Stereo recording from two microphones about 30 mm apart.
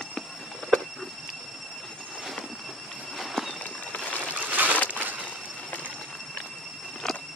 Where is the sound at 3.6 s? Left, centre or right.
Left.